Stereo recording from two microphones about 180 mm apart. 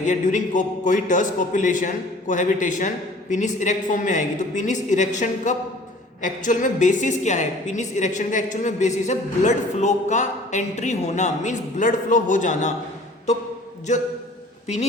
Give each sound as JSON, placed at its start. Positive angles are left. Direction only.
{"t": 0.0, "sound": "a man's voice", "side_deg": 45}